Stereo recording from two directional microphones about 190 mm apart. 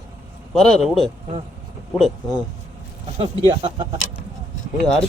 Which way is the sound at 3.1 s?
30° right (ahead or behind).